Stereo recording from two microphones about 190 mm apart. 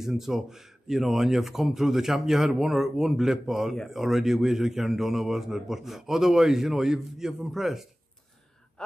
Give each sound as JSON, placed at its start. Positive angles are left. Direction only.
{"t": 0.0, "sound": "a man's voice", "side_deg": 0}